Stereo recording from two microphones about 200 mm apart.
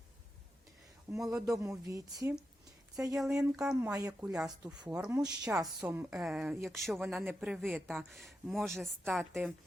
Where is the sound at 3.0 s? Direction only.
10° right (ahead or behind).